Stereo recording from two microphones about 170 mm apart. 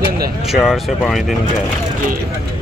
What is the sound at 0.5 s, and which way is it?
Speech, centre (ahead or behind).